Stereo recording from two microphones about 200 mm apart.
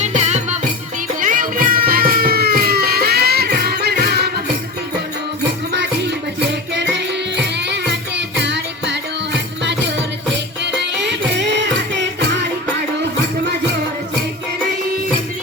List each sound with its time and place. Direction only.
0.0 s music: 35° right (ahead or behind); by 4.3 s 55° right (ahead or behind)
8.4 s music: 60° right (ahead or behind)
10.9 s music: 60° right (ahead or behind)